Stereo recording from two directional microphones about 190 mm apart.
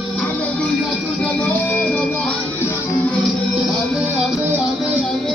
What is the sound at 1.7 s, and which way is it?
Music, 5° left (ahead or behind).